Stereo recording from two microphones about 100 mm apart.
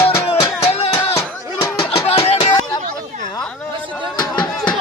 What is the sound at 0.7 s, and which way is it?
Music, 90° left.